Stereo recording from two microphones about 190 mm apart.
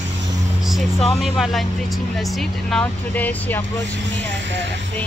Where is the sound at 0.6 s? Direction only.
Centre (ahead or behind).